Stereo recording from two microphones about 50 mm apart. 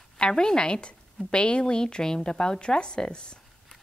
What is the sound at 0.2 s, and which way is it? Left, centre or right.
Speech, centre.